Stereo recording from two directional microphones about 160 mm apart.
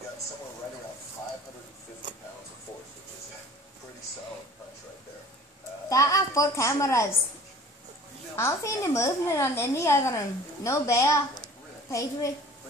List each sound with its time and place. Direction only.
5.9 s a woman's voice: 20° left (ahead or behind)
8.4 s a woman's voice: 15° left (ahead or behind)